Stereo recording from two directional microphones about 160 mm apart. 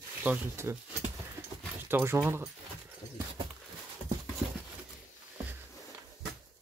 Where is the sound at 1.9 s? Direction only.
15° right (ahead or behind).